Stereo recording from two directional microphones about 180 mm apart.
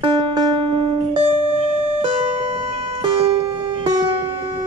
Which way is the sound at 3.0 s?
35° right (ahead or behind).